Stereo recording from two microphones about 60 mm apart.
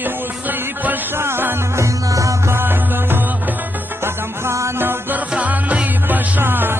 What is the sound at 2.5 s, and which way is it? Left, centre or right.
Music, right.